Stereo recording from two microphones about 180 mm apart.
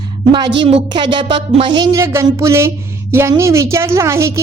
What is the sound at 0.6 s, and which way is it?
A woman's voice, 30° right (ahead or behind).